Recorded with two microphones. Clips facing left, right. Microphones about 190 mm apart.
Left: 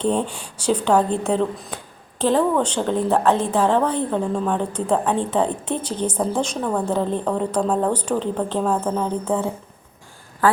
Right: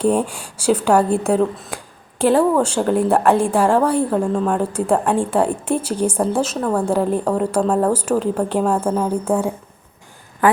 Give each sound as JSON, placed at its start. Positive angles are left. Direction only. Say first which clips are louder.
{"t": 0.0, "sound": "speech", "louder": "right 4 dB", "side_deg": -10}